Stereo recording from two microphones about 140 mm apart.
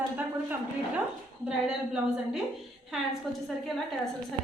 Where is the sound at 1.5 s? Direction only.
5° right (ahead or behind).